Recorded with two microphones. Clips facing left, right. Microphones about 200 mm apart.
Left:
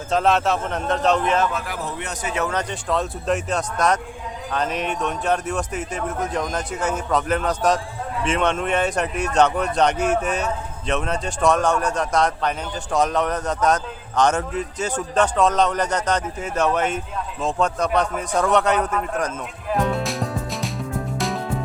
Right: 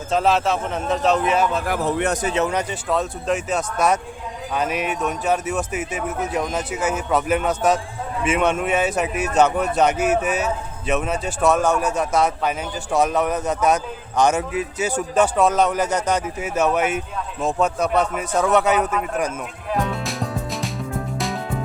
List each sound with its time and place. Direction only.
0.1 s speech: centre (ahead or behind)
1.6 s speech: 60° right (ahead or behind)
2.3 s speech: 20° right (ahead or behind)
2.6 s speech: 5° right (ahead or behind)
19.7 s music: centre (ahead or behind)